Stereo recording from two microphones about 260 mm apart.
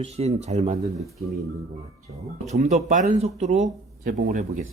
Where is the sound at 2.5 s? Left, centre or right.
Right.